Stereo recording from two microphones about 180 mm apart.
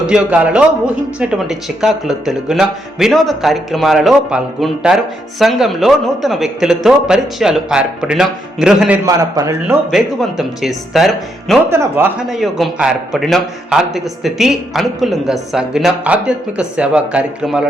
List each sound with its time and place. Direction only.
0.0 s a man's voice: 5° right (ahead or behind)
9.0 s a man's voice: 20° right (ahead or behind)
9.9 s a man's voice: centre (ahead or behind)
11.7 s a man's voice: 15° right (ahead or behind)
12.3 s a man's voice: centre (ahead or behind)